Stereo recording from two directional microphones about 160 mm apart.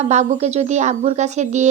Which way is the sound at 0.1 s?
45° right (ahead or behind).